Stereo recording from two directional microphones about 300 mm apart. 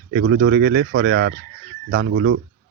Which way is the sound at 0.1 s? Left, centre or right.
Right.